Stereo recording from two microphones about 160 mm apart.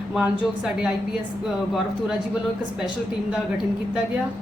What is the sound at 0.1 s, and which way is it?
Speech, 5° right (ahead or behind).